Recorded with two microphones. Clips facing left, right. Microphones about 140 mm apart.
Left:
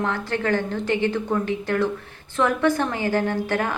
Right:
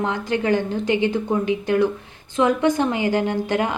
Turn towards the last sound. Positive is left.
turn(degrees=-20)  # may be behind; listen again after turning